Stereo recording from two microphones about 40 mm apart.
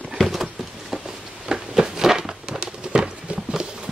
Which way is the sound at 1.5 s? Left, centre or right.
Centre.